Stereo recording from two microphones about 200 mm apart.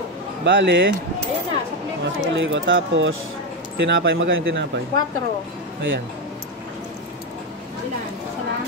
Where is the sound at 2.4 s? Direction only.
70° right (ahead or behind).